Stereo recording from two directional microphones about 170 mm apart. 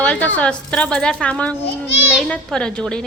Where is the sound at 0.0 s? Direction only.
5° left (ahead or behind).